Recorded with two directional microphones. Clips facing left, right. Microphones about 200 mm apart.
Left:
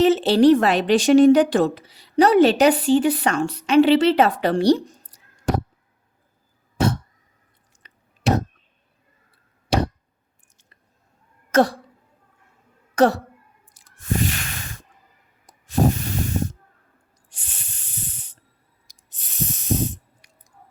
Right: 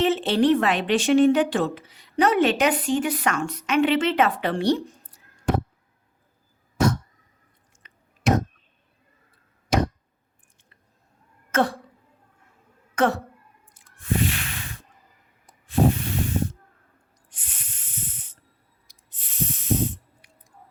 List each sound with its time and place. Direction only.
0.0 s speech: 35° left (ahead or behind)
7.8 s chewing: 35° left (ahead or behind)
9.6 s chop: 35° left (ahead or behind)
11.5 s speech: 40° left (ahead or behind)
13.0 s speech: 35° left (ahead or behind)
14.1 s a sound: 45° left (ahead or behind)
15.7 s spray: 45° left (ahead or behind)
17.6 s snake: 30° left (ahead or behind)
19.2 s spray: 40° left (ahead or behind)